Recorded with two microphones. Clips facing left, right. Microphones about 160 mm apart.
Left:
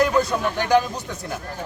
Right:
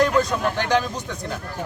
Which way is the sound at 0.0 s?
10° left (ahead or behind).